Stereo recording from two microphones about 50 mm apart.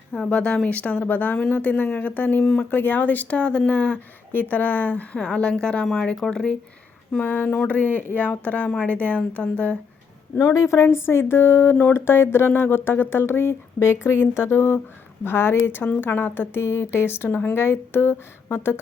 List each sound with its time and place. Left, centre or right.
0.3 s speech: left
3.3 s speech: left
4.3 s speech: left
5.1 s speech: left
7.7 s speech: left
10.3 s a woman's voice: left
10.8 s speech: left
11.7 s speech: left
11.9 s speech: left
17.2 s speech: left
17.5 s speech: left